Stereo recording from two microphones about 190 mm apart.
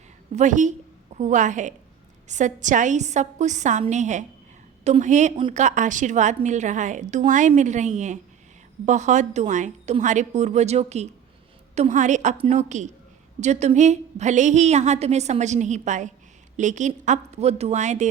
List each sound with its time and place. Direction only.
0.3 s a woman's voice: 40° right (ahead or behind)